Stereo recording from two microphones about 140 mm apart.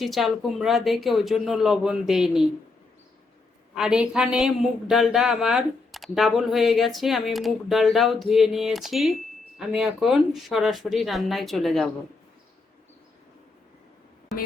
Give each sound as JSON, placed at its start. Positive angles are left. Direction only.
{"t": 0.0, "sound": "speech", "side_deg": 0}
{"t": 3.8, "sound": "speech", "side_deg": -5}